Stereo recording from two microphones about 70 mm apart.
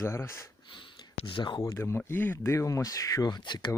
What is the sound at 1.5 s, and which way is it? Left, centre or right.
Speech, left.